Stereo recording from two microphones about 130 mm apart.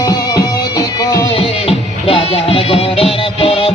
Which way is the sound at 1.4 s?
45° left (ahead or behind).